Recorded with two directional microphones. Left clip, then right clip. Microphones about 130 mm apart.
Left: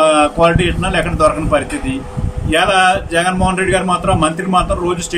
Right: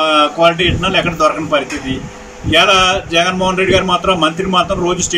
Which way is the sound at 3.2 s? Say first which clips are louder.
Right 2 dB; 5° left (ahead or behind).